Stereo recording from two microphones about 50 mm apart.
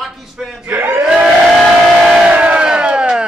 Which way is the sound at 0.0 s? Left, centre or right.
Centre.